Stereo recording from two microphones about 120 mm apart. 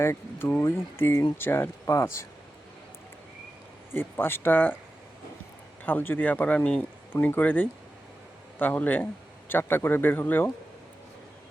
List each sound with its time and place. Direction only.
0.0 s speech: 20° left (ahead or behind)
3.9 s speech: 20° left (ahead or behind)
5.8 s speech: 15° left (ahead or behind)